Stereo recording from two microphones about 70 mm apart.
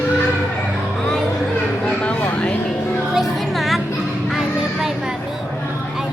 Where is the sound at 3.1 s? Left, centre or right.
Centre.